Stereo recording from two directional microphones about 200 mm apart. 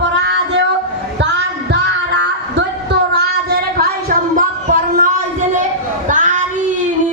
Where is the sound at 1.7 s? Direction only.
60° right (ahead or behind); by 5.6 s 40° right (ahead or behind).